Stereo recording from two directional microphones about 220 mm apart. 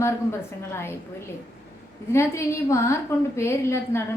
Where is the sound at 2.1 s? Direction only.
15° left (ahead or behind).